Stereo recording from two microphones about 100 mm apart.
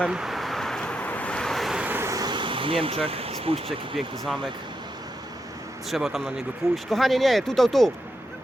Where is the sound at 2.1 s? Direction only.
45° right (ahead or behind); by 4.0 s 65° right (ahead or behind).